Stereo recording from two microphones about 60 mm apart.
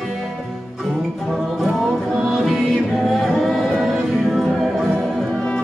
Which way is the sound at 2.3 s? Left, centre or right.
Centre.